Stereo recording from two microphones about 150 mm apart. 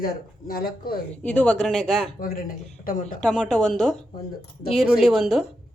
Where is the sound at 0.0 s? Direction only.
80° left.